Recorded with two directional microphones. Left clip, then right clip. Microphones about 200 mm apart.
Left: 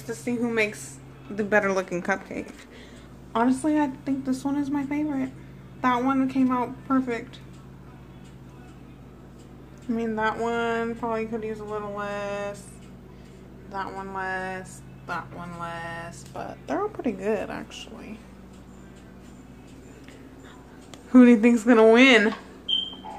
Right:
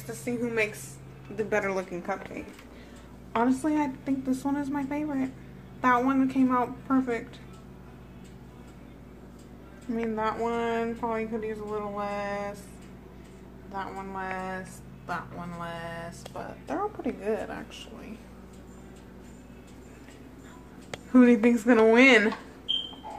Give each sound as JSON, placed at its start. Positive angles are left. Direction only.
{"t": 0.1, "sound": "speech", "side_deg": 10}
{"t": 3.3, "sound": "a woman's voice", "side_deg": 5}
{"t": 9.8, "sound": "speech", "side_deg": 10}
{"t": 13.7, "sound": "speech", "side_deg": 15}
{"t": 15.0, "sound": "a woman's voice", "side_deg": 5}
{"t": 16.4, "sound": "speech", "side_deg": 20}
{"t": 21.1, "sound": "speech", "side_deg": 15}